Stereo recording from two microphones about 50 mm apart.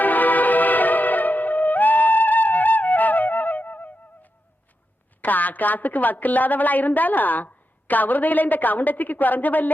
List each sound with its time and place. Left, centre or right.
0.0 s music: left
5.2 s a woman's voice: left